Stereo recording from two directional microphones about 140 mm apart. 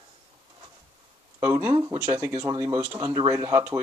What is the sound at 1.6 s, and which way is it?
Speech, 35° right (ahead or behind).